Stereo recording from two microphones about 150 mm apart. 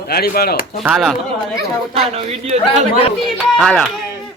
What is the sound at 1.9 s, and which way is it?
Speech, 40° right (ahead or behind).